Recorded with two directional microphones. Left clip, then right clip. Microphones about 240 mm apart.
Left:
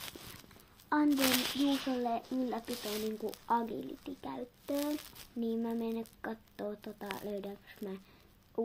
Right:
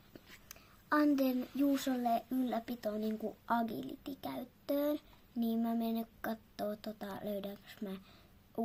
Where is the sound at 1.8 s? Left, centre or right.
Right.